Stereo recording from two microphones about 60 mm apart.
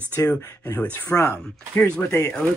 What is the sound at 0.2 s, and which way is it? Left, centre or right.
Speech, left.